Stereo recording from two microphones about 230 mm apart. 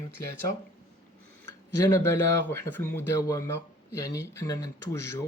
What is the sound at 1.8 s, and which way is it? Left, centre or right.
Speech, centre.